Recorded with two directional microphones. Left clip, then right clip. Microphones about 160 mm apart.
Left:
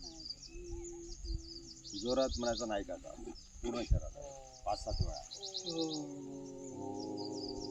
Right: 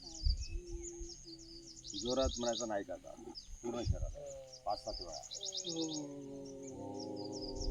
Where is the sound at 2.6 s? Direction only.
30° left (ahead or behind).